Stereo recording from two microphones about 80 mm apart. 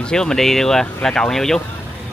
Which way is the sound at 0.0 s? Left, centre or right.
Centre.